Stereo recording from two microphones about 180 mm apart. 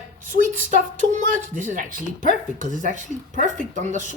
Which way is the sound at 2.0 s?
45° left (ahead or behind).